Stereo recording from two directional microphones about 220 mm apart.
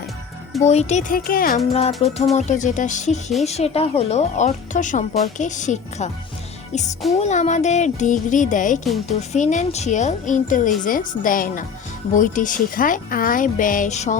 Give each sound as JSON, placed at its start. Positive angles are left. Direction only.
{"t": 0.6, "sound": "speech", "side_deg": 30}
{"t": 7.2, "sound": "speech", "side_deg": 30}